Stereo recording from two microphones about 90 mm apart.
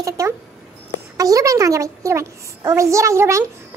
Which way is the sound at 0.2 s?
35° right (ahead or behind).